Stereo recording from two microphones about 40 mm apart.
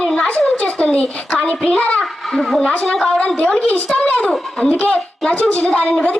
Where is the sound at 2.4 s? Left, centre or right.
Centre.